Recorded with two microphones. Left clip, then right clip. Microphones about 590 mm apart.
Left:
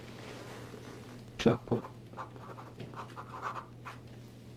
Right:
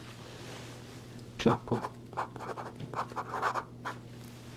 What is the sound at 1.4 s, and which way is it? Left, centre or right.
Speech, centre.